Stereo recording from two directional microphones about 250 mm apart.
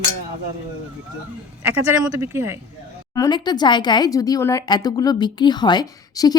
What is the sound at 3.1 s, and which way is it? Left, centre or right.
Speech, centre.